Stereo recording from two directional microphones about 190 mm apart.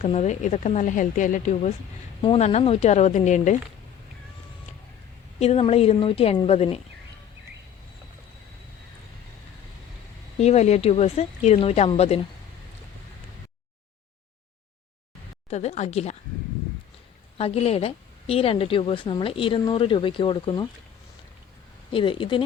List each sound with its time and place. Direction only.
0.0 s speech: 35° left (ahead or behind)
2.2 s speech: 30° left (ahead or behind)
5.4 s speech: 35° left (ahead or behind)
10.3 s speech: 35° left (ahead or behind)
15.4 s speech: 35° left (ahead or behind)
17.3 s a woman's voice: 30° left (ahead or behind)
21.9 s a woman's voice: 25° left (ahead or behind)